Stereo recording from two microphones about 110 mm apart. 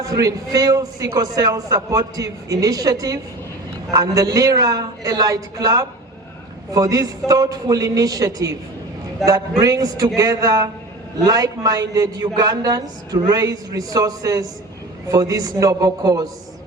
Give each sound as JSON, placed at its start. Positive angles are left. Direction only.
{"t": 0.0, "sound": "a man's voice", "side_deg": -35}